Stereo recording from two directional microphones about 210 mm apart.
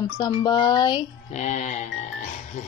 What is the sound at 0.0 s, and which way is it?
Speech, 20° left (ahead or behind).